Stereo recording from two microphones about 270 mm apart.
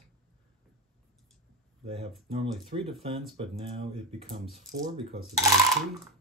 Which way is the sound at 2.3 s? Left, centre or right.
Centre.